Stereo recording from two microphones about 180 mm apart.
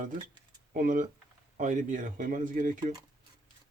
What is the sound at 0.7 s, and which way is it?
Speech, 50° right (ahead or behind).